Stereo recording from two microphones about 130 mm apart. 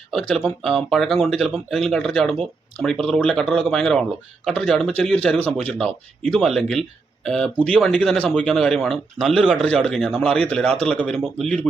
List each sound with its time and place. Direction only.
0.1 s speech: 5° left (ahead or behind)